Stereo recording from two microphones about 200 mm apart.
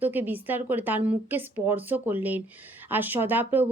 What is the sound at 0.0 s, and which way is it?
Speech, 10° right (ahead or behind).